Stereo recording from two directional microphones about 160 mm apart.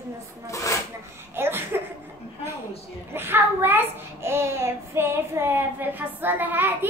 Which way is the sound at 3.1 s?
15° right (ahead or behind).